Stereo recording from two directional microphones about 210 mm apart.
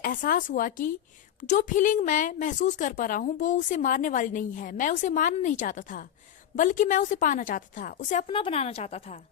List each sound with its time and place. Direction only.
0.0 s a woman's voice: 40° left (ahead or behind)
8.3 s a woman's voice: 25° left (ahead or behind)